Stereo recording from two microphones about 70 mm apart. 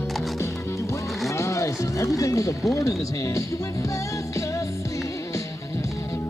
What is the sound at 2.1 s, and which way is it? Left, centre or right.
Speech, left.